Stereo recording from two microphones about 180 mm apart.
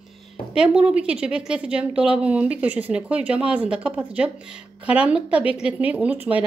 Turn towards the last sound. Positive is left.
turn(degrees=-10)  # may be behind; listen again after turning